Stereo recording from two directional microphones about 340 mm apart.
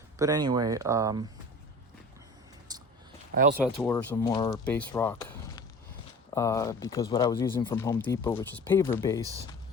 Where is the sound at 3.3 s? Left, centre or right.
Right.